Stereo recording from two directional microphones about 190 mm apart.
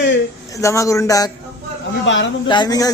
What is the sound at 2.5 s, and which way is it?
Speech, 20° left (ahead or behind).